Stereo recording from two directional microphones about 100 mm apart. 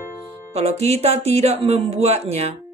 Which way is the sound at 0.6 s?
90° right.